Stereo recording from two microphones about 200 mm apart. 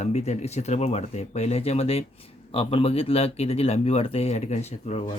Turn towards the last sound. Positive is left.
turn(degrees=30)  # may be behind; listen again after turning